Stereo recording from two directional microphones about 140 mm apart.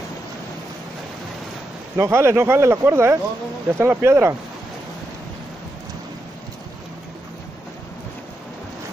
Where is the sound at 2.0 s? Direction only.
20° right (ahead or behind).